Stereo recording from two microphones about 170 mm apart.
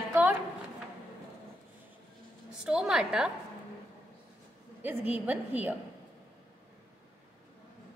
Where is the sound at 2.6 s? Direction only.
5° right (ahead or behind).